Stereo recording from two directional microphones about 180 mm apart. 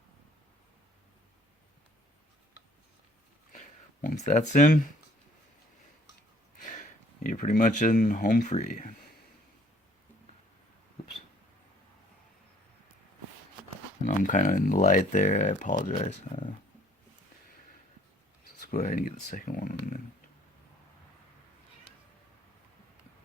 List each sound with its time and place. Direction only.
3.5 s a sound: 45° left (ahead or behind)
6.6 s speech: 45° left (ahead or behind)
14.0 s speech: 45° left (ahead or behind)
18.7 s speech: 50° left (ahead or behind)